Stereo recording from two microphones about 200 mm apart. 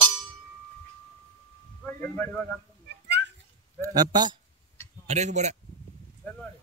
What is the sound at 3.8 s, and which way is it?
Speech, 20° right (ahead or behind).